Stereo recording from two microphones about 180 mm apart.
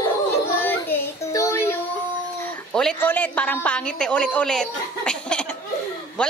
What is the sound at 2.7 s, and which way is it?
A woman's voice, 5° left (ahead or behind).